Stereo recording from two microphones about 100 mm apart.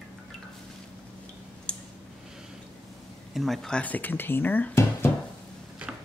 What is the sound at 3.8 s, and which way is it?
Speech, 15° left (ahead or behind).